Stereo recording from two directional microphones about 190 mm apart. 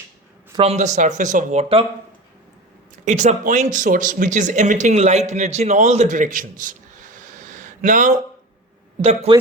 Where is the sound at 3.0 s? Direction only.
40° right (ahead or behind).